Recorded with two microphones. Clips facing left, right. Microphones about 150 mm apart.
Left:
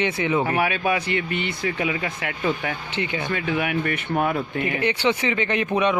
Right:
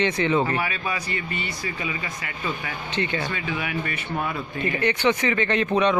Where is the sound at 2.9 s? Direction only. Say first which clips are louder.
Right 4 dB; 15° left (ahead or behind).